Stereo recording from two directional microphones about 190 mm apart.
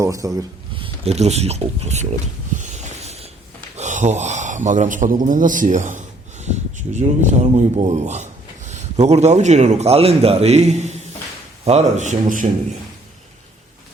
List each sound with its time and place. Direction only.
0.0 s speech: 15° right (ahead or behind)
0.8 s speech: 35° right (ahead or behind)
2.6 s a sound: 40° right (ahead or behind)
3.8 s a man's voice: 40° right (ahead or behind)